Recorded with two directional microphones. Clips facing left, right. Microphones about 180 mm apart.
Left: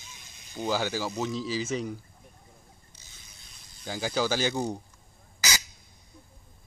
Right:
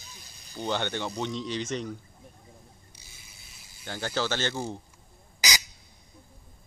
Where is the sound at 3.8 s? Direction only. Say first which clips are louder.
Left 2 dB; 10° left (ahead or behind).